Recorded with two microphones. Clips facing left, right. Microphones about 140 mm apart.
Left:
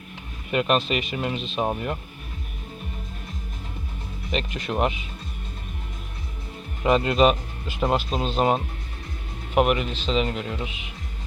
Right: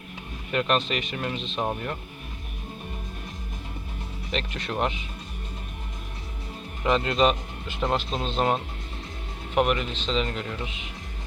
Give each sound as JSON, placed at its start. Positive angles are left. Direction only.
{"t": 0.5, "sound": "speech", "side_deg": 5}
{"t": 4.3, "sound": "speech", "side_deg": 10}
{"t": 6.8, "sound": "speech", "side_deg": 20}
{"t": 10.2, "sound": "speech", "side_deg": 20}